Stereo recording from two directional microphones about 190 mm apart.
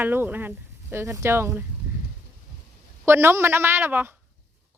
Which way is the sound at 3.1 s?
15° right (ahead or behind).